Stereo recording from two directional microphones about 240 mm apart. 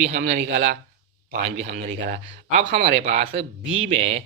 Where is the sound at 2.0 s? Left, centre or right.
Right.